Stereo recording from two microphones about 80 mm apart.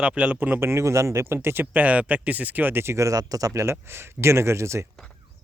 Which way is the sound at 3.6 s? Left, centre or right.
Right.